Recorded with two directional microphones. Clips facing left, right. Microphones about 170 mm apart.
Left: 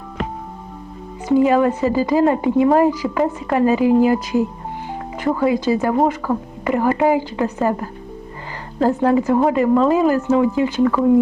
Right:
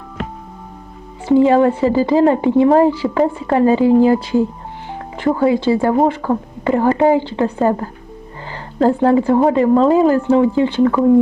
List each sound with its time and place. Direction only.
1.3 s speech: 25° right (ahead or behind)